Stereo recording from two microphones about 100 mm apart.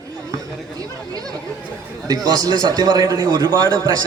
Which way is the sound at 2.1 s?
40° right (ahead or behind).